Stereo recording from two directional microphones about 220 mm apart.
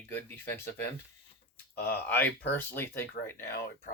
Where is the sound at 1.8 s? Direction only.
10° left (ahead or behind).